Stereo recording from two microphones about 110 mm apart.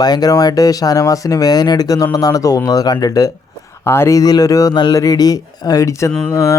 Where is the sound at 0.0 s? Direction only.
35° left (ahead or behind).